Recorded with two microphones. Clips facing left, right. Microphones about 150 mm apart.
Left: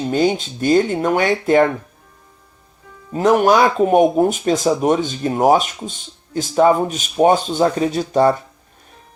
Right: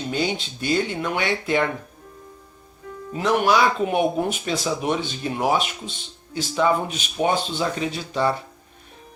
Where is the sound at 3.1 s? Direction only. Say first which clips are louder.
Left 6 dB; 40° left (ahead or behind).